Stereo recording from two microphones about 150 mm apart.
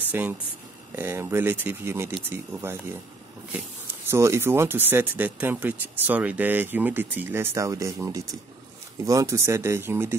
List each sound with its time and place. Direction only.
0.1 s speech: 10° right (ahead or behind)
4.1 s speech: 20° right (ahead or behind)